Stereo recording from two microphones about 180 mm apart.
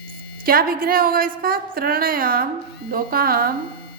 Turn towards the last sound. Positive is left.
turn(degrees=-55)  # may be behind; listen again after turning